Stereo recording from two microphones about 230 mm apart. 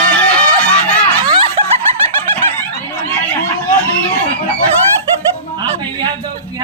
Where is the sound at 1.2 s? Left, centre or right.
Right.